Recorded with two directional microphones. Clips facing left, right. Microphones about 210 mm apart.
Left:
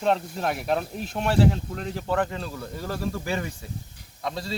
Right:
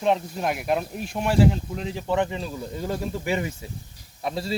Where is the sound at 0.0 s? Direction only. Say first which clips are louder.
Right 1 dB; 5° right (ahead or behind).